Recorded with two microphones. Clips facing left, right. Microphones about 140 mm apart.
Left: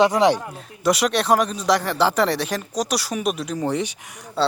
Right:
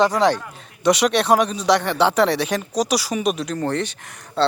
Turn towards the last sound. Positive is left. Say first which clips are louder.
# right 2 dB
turn(degrees=5)  # may be behind; listen again after turning